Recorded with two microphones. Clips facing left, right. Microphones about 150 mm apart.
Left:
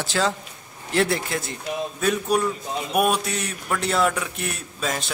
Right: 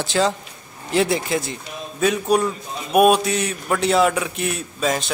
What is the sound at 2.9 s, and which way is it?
Speech, 20° right (ahead or behind).